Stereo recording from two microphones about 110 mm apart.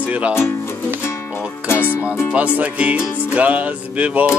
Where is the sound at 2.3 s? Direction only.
10° right (ahead or behind).